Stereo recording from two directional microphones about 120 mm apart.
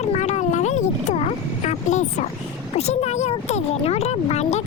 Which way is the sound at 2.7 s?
60° left (ahead or behind).